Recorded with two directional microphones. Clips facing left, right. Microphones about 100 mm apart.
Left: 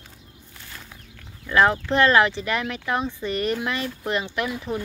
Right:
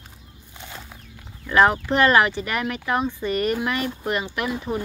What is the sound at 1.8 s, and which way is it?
Speech, 10° right (ahead or behind).